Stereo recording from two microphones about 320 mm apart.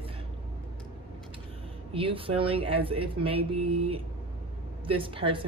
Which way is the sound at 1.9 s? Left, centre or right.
Centre.